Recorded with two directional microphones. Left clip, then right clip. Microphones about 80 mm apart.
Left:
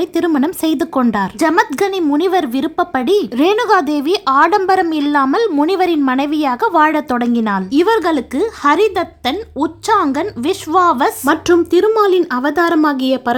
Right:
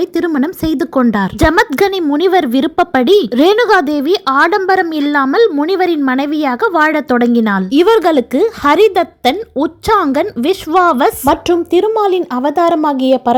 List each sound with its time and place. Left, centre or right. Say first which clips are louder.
0.3 s speech: even; right
1.1 s a woman's voice: right 2 dB; right
7.7 s speech: right 4 dB; right
11.4 s speech: even; right